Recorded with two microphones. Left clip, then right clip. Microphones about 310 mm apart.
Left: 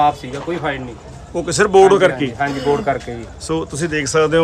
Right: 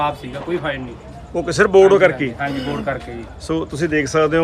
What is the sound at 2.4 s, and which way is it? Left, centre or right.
Speech, left.